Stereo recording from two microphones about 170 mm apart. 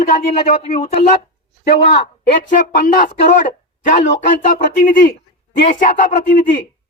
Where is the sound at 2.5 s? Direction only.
50° left (ahead or behind).